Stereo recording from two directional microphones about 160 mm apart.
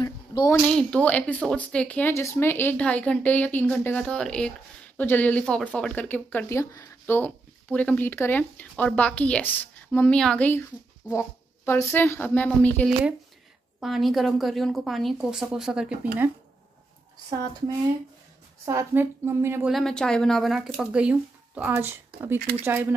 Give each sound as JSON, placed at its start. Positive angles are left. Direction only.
{"t": 0.0, "sound": "a sound", "side_deg": 25}
{"t": 0.7, "sound": "speech", "side_deg": 5}
{"t": 18.7, "sound": "speech", "side_deg": -15}
{"t": 19.7, "sound": "speech", "side_deg": 5}